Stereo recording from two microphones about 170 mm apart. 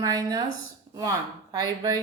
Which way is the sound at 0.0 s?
20° right (ahead or behind).